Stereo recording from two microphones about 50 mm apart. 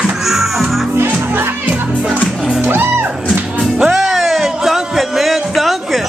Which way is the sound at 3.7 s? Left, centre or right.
Centre.